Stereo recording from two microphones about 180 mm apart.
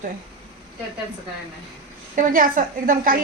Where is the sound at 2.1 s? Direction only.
45° right (ahead or behind).